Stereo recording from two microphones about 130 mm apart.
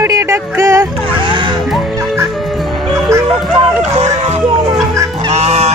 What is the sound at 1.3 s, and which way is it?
Music, 40° right (ahead or behind).